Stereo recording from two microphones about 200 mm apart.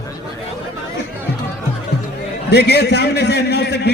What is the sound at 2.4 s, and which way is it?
A man's voice, 55° left (ahead or behind).